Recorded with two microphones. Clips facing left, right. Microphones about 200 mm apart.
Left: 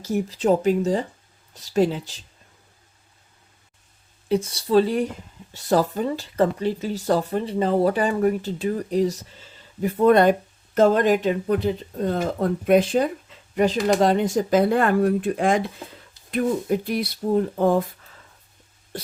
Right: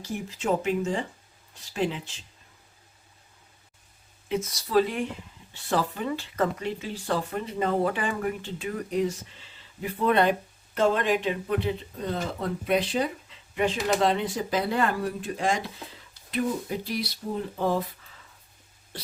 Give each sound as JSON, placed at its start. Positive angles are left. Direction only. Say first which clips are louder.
{"t": 0.0, "sound": "speech", "louder": "left 8 dB", "side_deg": 40}
{"t": 4.3, "sound": "speech", "louder": "left 7 dB", "side_deg": 30}